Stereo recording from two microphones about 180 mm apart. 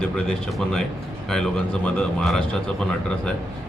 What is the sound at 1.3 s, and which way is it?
Speech, 5° left (ahead or behind).